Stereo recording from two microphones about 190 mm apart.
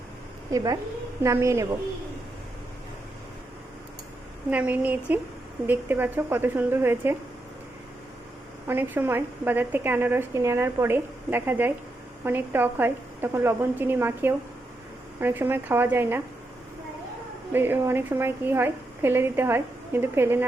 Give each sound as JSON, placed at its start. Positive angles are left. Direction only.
{"t": 0.5, "sound": "a woman's voice", "side_deg": -20}
{"t": 4.4, "sound": "a woman's voice", "side_deg": -10}
{"t": 8.6, "sound": "a woman's voice", "side_deg": -10}
{"t": 17.5, "sound": "a woman's voice", "side_deg": -10}